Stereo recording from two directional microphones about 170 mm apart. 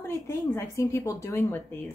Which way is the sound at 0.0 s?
15° left (ahead or behind).